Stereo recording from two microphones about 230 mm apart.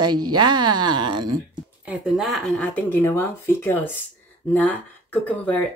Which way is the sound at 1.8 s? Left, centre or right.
Centre.